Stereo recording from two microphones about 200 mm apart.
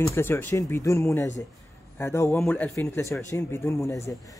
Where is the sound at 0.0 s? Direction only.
10° left (ahead or behind).